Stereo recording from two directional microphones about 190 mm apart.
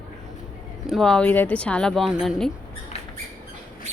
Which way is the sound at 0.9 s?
Centre (ahead or behind).